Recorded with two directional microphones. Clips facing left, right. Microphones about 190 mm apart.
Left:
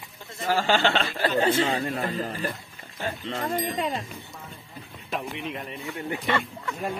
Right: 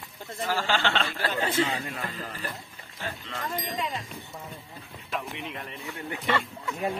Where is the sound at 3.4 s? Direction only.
50° left (ahead or behind).